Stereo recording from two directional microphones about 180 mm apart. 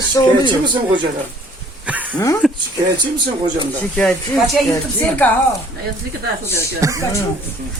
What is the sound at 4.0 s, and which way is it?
Speech, 5° left (ahead or behind).